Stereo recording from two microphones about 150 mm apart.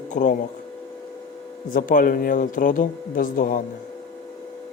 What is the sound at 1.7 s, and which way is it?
Speech, 65° left (ahead or behind).